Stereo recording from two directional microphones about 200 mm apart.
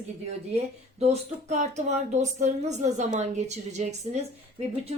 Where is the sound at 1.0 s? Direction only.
35° right (ahead or behind).